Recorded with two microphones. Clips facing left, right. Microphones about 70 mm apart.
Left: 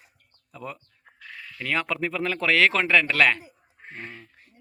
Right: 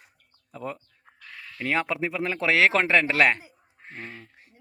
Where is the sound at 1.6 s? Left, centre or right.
Right.